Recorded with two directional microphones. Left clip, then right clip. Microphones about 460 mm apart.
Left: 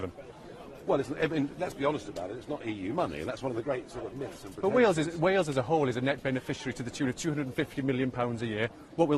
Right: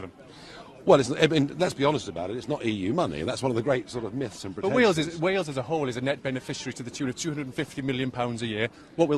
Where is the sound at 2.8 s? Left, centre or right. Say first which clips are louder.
Right 5 dB; centre.